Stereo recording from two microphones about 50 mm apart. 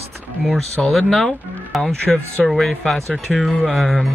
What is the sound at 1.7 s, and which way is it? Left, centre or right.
Speech, centre.